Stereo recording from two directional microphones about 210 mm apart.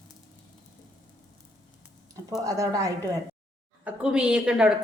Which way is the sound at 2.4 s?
15° right (ahead or behind).